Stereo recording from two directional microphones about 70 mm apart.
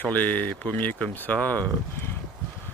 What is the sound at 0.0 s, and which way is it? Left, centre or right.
Speech, left.